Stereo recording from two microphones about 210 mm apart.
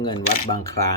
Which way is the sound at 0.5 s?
15° left (ahead or behind).